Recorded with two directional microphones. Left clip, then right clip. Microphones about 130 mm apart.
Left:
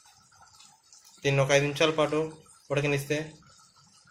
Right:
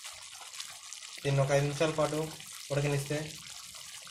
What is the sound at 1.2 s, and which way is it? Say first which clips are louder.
Speech: left 5 dB; 15° left (ahead or behind).